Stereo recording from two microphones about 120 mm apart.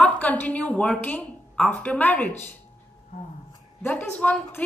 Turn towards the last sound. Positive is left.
turn(degrees=10)  # may be behind; listen again after turning